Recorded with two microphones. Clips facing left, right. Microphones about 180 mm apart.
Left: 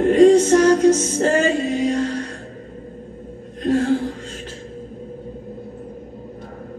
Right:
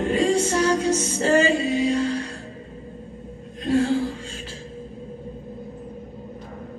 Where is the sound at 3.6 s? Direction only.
45° left (ahead or behind).